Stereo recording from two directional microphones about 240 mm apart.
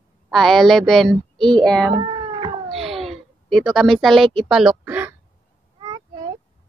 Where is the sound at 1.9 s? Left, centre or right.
Right.